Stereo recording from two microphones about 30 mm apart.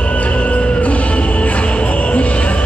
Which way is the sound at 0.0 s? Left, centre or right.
Left.